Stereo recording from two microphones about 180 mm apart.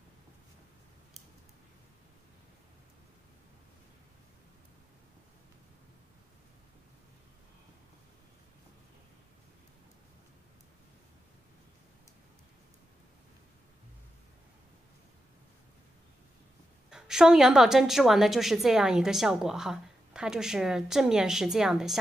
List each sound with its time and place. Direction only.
16.9 s a woman's voice: 5° right (ahead or behind)